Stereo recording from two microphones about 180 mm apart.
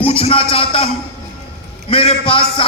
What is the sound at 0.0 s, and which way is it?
Speech, 30° left (ahead or behind).